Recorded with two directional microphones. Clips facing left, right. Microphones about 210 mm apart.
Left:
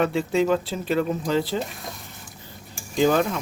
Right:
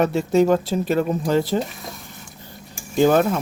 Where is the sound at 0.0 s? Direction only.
45° right (ahead or behind).